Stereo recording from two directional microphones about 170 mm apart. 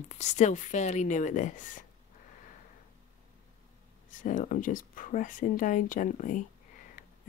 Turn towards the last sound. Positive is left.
turn(degrees=50)  # may be behind; listen again after turning